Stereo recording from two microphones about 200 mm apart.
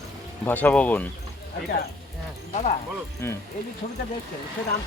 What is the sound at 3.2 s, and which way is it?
Speech, 10° left (ahead or behind).